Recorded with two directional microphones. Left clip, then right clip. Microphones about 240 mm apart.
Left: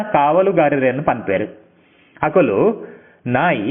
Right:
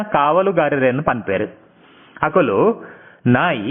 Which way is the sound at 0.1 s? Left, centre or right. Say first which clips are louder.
Left 1 dB; centre.